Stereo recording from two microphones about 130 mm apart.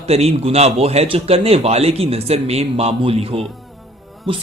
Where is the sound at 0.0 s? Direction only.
50° right (ahead or behind).